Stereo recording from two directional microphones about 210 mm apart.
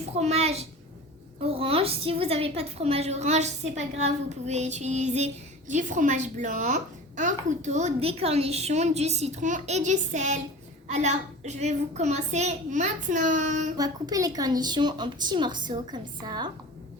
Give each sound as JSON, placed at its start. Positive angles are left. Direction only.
{"t": 0.2, "sound": "a woman's voice", "side_deg": -30}
{"t": 13.7, "sound": "a woman's voice", "side_deg": -15}